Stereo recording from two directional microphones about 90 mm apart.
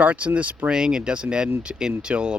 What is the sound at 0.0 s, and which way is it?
Speech, 15° right (ahead or behind).